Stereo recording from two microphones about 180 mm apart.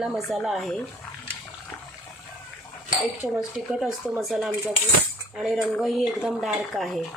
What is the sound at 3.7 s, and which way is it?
Speech, centre (ahead or behind).